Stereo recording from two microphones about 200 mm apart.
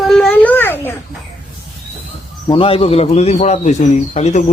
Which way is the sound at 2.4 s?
25° left (ahead or behind).